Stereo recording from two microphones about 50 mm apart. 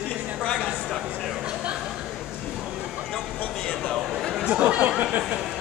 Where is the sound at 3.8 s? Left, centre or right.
Centre.